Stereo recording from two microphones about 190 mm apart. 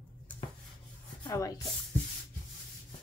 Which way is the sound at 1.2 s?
15° left (ahead or behind).